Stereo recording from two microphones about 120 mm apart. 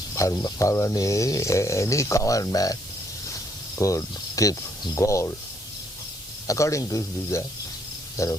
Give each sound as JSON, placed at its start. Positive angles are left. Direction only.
{"t": 0.1, "sound": "speech", "side_deg": 25}
{"t": 3.8, "sound": "speech", "side_deg": 25}
{"t": 6.5, "sound": "speech", "side_deg": 25}